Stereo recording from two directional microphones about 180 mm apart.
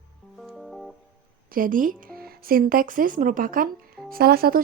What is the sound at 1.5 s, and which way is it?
A woman's voice, 50° right (ahead or behind).